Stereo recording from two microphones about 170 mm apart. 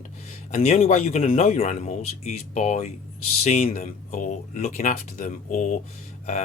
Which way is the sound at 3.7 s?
55° left (ahead or behind).